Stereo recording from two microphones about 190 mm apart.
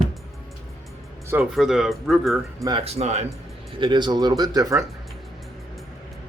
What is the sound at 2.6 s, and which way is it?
Speech, 30° right (ahead or behind).